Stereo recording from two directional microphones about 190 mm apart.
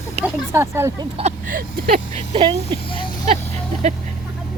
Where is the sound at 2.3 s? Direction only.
30° right (ahead or behind).